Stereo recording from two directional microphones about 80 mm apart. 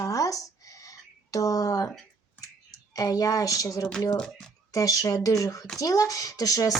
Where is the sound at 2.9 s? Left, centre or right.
Left.